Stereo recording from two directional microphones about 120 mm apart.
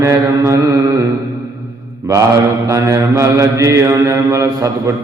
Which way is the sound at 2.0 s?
30° right (ahead or behind).